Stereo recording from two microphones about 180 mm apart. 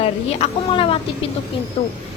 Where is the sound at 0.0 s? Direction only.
35° left (ahead or behind).